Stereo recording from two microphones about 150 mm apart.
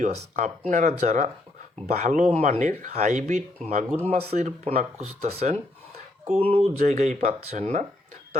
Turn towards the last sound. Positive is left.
turn(degrees=-50)  # may be behind; listen again after turning